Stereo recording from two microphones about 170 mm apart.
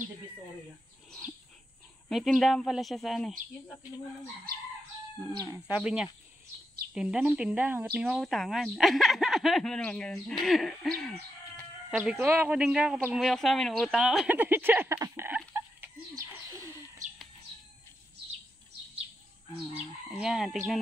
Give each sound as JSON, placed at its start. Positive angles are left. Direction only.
{"t": 2.0, "sound": "a woman's voice", "side_deg": 0}
{"t": 5.2, "sound": "speech", "side_deg": -20}
{"t": 5.7, "sound": "a woman's voice", "side_deg": -5}
{"t": 12.0, "sound": "a woman's voice", "side_deg": -10}
{"t": 15.0, "sound": "a sound", "side_deg": -15}
{"t": 20.2, "sound": "a woman's voice", "side_deg": -5}